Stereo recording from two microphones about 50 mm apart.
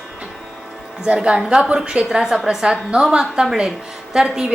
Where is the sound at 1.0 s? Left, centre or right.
Centre.